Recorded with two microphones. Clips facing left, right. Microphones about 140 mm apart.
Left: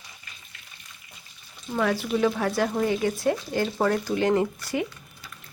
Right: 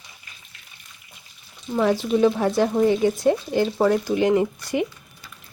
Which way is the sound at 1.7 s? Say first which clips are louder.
Right 5 dB; 20° right (ahead or behind).